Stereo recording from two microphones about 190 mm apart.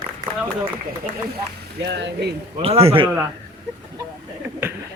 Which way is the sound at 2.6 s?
30° right (ahead or behind).